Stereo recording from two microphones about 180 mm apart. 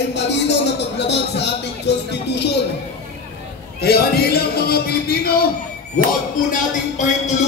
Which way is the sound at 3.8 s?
60° left (ahead or behind).